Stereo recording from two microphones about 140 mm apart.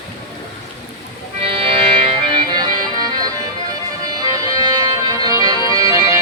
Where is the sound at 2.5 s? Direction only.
30° right (ahead or behind).